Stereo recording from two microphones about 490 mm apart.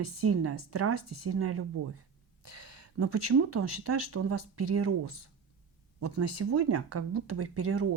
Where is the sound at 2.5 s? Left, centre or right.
Right.